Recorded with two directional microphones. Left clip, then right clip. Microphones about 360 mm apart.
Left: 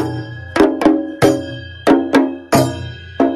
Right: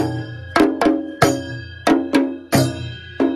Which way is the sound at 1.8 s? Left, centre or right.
Centre.